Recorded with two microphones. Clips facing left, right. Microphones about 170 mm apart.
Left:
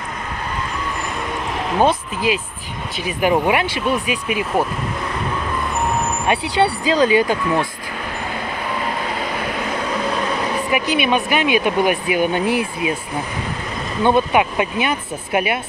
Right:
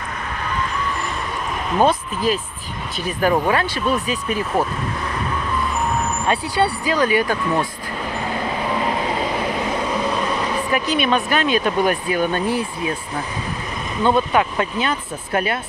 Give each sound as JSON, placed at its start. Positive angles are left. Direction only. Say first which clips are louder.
{"t": 3.1, "sound": "speech", "louder": "left 1 dB", "side_deg": 15}
{"t": 6.2, "sound": "speech", "louder": "left 2 dB", "side_deg": 20}
{"t": 10.7, "sound": "speech", "louder": "left 1 dB", "side_deg": 10}
{"t": 14.0, "sound": "speech", "louder": "left 2 dB", "side_deg": 15}